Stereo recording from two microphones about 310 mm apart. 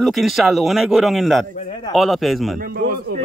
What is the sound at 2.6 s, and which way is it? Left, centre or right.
Speech, right.